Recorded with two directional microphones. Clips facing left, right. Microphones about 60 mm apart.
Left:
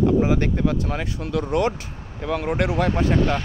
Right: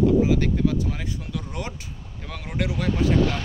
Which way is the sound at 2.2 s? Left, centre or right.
Left.